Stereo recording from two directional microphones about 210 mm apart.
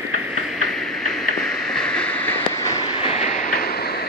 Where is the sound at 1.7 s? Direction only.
5° left (ahead or behind).